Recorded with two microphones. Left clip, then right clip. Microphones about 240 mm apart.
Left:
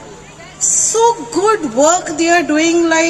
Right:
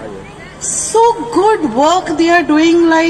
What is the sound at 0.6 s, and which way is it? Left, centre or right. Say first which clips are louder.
A woman's voice: right 1 dB; left.